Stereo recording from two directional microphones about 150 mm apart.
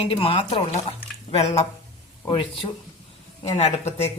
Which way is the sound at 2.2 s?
35° left (ahead or behind).